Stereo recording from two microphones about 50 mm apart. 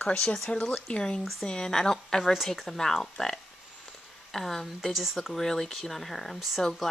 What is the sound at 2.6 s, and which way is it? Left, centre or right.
Speech, centre.